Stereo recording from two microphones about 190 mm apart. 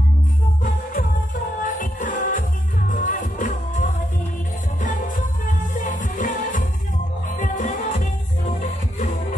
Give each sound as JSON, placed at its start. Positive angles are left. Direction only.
{"t": 0.9, "sound": "music", "side_deg": 45}